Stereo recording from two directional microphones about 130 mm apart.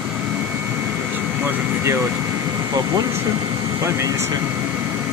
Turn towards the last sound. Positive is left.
turn(degrees=-25)  # may be behind; listen again after turning